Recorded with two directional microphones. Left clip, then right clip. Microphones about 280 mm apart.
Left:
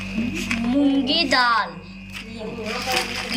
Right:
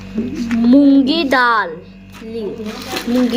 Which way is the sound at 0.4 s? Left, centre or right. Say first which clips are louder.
Right 10 dB; centre.